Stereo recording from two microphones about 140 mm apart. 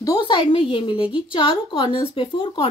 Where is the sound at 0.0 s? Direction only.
30° left (ahead or behind).